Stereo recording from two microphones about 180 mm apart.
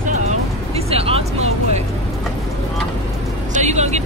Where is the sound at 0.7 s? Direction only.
35° right (ahead or behind).